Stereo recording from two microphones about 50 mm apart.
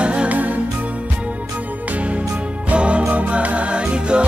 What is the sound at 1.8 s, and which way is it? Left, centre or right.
Music, right.